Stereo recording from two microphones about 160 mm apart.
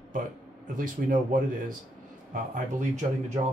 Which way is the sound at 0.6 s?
55° right (ahead or behind).